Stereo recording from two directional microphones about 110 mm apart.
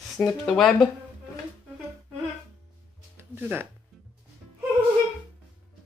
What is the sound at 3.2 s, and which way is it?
Music, 20° right (ahead or behind).